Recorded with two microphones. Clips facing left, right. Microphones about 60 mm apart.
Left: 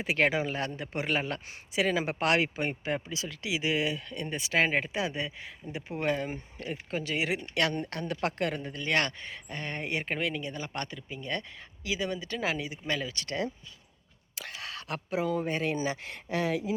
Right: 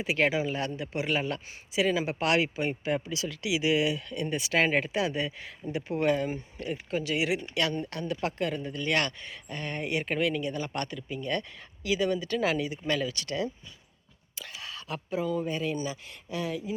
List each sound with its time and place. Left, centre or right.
0.0 s speech: left
6.6 s speech: left
7.5 s speech: left
8.6 s speech: left
14.3 s speech: left
15.7 s speech: left